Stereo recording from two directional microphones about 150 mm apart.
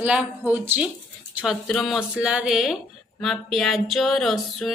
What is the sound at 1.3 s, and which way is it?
A woman's voice, centre (ahead or behind).